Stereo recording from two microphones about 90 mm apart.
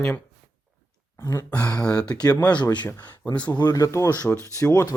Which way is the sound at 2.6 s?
55° left (ahead or behind).